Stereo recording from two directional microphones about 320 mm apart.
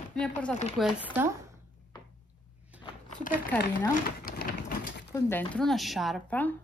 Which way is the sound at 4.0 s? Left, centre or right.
Left.